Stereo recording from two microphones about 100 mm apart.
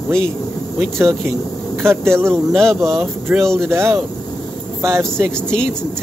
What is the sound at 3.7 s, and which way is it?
Speech, 25° right (ahead or behind).